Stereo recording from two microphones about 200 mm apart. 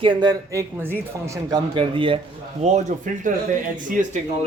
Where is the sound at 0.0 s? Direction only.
20° right (ahead or behind).